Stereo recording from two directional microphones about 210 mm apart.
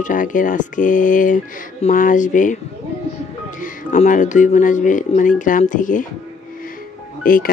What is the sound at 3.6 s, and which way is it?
Speech, 35° left (ahead or behind).